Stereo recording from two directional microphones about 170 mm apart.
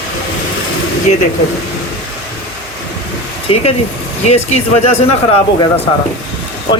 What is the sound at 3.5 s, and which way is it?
A man's voice, 30° left (ahead or behind).